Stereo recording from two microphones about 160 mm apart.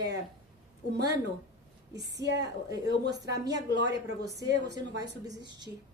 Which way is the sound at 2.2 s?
25° left (ahead or behind).